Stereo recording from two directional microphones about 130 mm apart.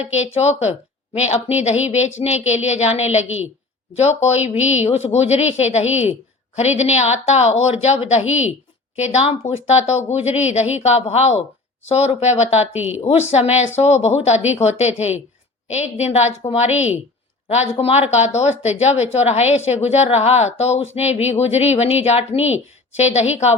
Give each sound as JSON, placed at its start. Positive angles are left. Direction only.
{"t": 0.0, "sound": "a woman's voice", "side_deg": 55}